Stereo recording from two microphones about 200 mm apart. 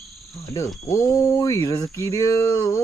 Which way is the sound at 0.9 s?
15° left (ahead or behind).